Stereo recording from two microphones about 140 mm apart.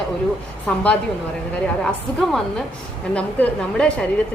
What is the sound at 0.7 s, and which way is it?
A woman's voice, 10° left (ahead or behind).